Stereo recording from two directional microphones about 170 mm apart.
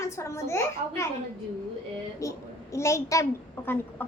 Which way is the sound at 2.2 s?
15° left (ahead or behind).